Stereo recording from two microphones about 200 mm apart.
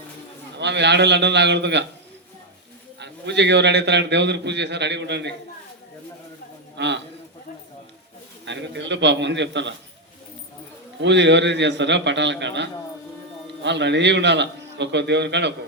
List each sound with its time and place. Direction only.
0.6 s a man's voice: 60° right (ahead or behind)
3.0 s a man's voice: 60° right (ahead or behind)
6.7 s a man's voice: 60° right (ahead or behind)
8.4 s a man's voice: 60° right (ahead or behind)
11.0 s a man's voice: 60° right (ahead or behind)